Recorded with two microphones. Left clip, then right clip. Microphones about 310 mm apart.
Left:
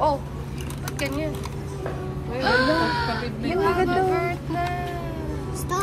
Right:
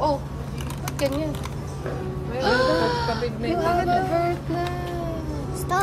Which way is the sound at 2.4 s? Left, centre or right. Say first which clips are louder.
Even; centre.